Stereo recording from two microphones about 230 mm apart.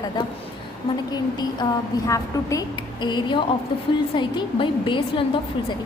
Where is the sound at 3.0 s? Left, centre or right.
Centre.